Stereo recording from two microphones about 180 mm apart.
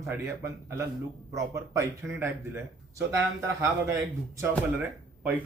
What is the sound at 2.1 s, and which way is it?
Speech, 15° right (ahead or behind).